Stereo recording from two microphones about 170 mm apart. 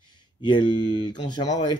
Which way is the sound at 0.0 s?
25° left (ahead or behind).